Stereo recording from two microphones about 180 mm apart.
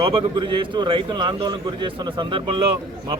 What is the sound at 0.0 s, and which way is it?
A man's voice, 25° right (ahead or behind).